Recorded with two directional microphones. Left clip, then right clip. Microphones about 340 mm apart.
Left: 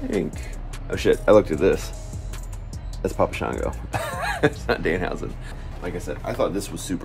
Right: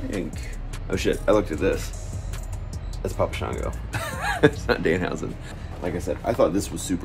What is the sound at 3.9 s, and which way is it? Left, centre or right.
Speech, centre.